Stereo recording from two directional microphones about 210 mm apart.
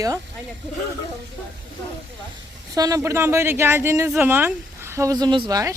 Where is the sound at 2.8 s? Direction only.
15° right (ahead or behind).